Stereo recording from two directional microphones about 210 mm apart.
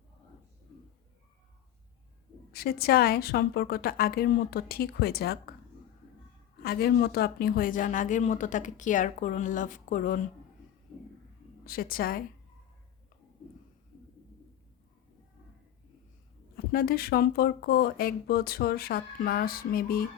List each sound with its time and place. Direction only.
2.5 s speech: 45° left (ahead or behind)
6.6 s speech: 45° left (ahead or behind)
11.6 s speech: 45° left (ahead or behind)
16.7 s speech: 45° left (ahead or behind)